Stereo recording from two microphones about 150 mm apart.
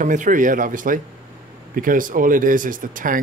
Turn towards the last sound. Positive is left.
turn(degrees=-65)  # may be behind; listen again after turning